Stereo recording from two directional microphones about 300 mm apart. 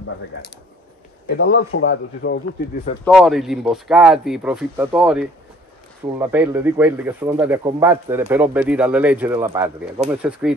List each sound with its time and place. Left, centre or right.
1.3 s speech: left
3.1 s speech: centre